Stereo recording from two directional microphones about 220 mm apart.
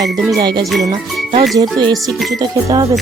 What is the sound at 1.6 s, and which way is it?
Music, 15° right (ahead or behind).